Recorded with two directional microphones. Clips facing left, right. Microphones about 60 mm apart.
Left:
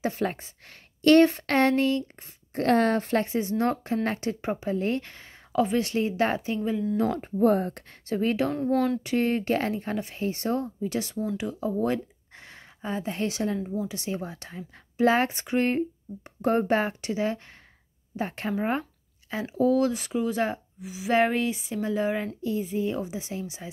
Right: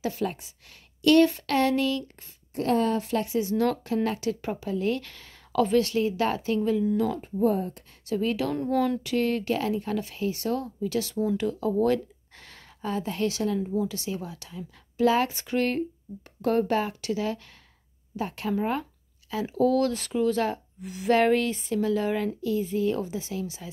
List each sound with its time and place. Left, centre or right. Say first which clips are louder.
0.0 s a woman's voice: left 1 dB; left
2.5 s speech: left 2 dB; left
7.0 s speech: left 1 dB; left
7.5 s speech: left 3 dB; left
8.1 s a woman's voice: left 1 dB; left
8.5 s speech: left 1 dB; centre
9.0 s speech: left 1 dB; left
19.4 s speech: even; centre
20.8 s speech: right 2 dB; centre
21.1 s speech: right 2 dB; centre